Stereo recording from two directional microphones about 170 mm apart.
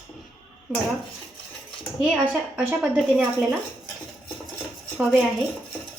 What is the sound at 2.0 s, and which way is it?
Speech, 5° right (ahead or behind).